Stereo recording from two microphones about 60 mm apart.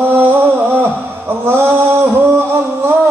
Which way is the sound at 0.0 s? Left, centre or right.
Right.